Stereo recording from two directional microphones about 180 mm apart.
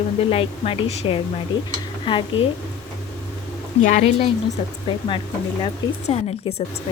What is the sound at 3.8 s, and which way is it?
Speech, 40° left (ahead or behind).